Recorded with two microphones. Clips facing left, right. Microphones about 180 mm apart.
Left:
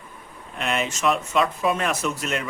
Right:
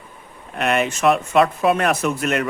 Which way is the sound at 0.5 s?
60° right (ahead or behind).